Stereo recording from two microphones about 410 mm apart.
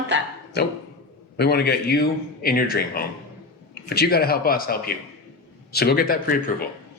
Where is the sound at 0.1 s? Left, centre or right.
Right.